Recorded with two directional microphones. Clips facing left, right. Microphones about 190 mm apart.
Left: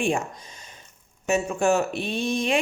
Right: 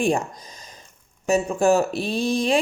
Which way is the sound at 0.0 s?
40° right (ahead or behind).